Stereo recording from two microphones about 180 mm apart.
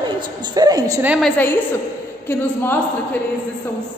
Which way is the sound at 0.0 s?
25° right (ahead or behind).